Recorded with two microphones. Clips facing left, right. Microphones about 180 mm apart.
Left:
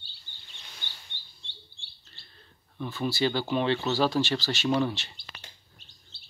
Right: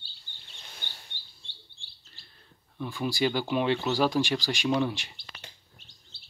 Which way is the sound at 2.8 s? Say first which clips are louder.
Even; 10° right (ahead or behind).